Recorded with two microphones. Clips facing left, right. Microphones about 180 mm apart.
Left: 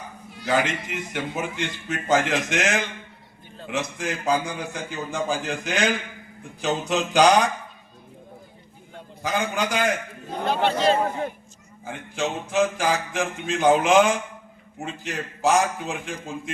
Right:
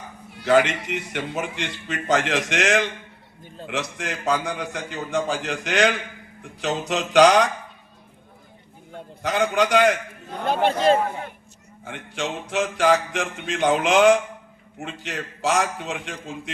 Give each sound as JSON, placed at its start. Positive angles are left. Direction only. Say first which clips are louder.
{"t": 0.3, "sound": "a man's voice", "louder": "right 5 dB", "side_deg": -65}
{"t": 9.2, "sound": "a man's voice", "louder": "right 4 dB", "side_deg": -80}
{"t": 10.4, "sound": "a man's voice", "louder": "right 2 dB", "side_deg": -50}
{"t": 11.9, "sound": "a man's voice", "louder": "left 1 dB", "side_deg": -80}